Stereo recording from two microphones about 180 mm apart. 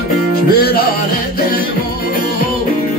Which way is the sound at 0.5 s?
55° left (ahead or behind).